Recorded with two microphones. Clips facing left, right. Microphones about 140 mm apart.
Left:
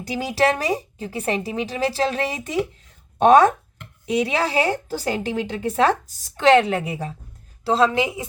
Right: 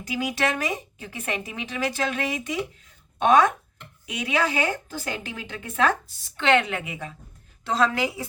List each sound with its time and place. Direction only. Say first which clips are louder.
0.0 s a woman's voice: left 5 dB; 35° left (ahead or behind)